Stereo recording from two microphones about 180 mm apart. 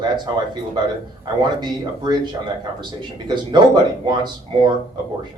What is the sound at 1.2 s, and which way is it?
Speech, 25° right (ahead or behind).